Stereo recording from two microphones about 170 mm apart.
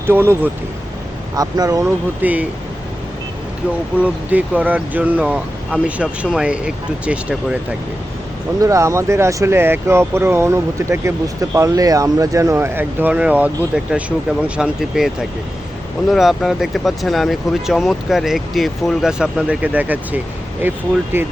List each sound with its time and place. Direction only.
0.1 s speech: 10° right (ahead or behind)
2.2 s speech: 10° right (ahead or behind)
4.0 s speech: 10° right (ahead or behind)
8.6 s speech: 20° right (ahead or behind)